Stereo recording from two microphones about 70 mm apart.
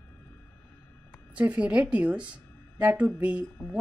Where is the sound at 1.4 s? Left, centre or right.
Right.